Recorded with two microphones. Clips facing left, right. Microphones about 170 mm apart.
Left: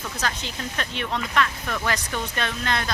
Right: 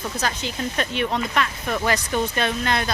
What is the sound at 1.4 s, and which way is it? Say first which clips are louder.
Speech: left 2 dB; 20° right (ahead or behind).